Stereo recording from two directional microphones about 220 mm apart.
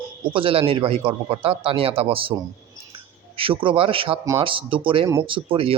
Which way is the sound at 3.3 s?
25° right (ahead or behind).